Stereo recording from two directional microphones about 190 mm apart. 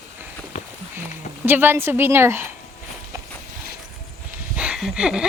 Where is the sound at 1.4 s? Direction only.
10° right (ahead or behind).